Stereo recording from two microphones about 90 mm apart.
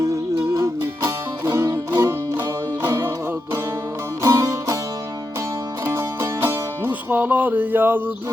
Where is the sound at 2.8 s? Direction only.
30° right (ahead or behind).